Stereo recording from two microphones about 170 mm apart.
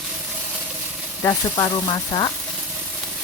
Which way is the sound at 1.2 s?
20° left (ahead or behind).